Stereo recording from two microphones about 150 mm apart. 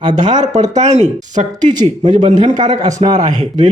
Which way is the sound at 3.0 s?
40° right (ahead or behind).